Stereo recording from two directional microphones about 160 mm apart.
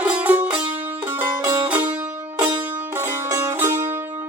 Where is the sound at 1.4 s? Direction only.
20° right (ahead or behind).